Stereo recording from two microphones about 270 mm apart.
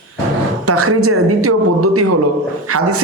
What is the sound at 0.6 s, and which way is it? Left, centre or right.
A man's voice, right.